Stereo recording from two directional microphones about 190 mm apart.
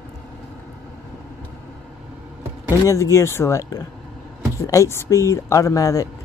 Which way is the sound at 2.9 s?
15° left (ahead or behind).